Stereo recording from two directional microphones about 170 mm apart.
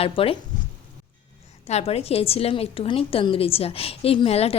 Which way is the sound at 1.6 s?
40° left (ahead or behind).